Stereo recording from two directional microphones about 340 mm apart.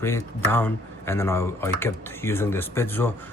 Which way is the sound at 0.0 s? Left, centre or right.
Centre.